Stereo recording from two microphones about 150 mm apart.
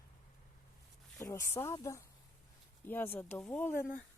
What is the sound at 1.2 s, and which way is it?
Speech, 20° left (ahead or behind).